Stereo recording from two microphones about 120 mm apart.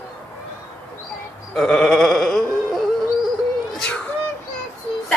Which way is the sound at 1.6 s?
5° left (ahead or behind).